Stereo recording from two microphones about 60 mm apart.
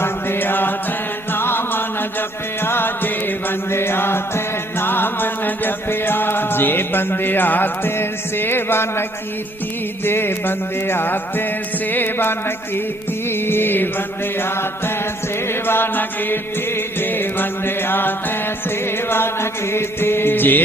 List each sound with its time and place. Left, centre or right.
0.0 s music: left
10.1 s music: left
15.6 s music: left
19.1 s music: left